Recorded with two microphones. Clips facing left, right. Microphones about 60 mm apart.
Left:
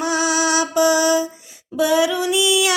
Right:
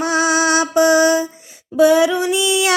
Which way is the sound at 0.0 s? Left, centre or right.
Right.